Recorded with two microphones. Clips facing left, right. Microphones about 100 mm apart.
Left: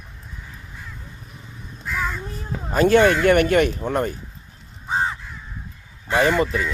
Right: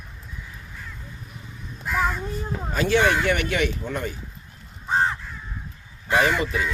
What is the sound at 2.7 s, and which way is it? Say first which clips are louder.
Speech: left 5 dB; 50° left (ahead or behind).